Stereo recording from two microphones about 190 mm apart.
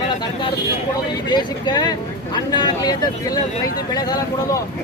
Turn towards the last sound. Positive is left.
turn(degrees=20)  # may be behind; listen again after turning